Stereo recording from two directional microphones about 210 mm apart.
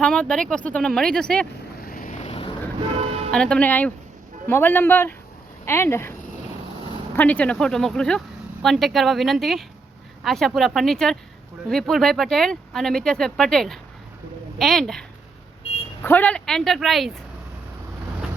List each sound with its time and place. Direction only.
0.0 s speech: 5° left (ahead or behind)
1.8 s vehicle: 45° left (ahead or behind)
3.3 s a man's voice: 5° left (ahead or behind)
7.2 s speech: 5° left (ahead or behind)
16.0 s speech: 10° left (ahead or behind)